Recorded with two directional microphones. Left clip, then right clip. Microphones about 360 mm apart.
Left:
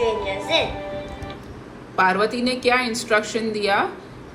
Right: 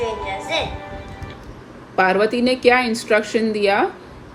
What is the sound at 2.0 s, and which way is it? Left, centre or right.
A woman's voice, right.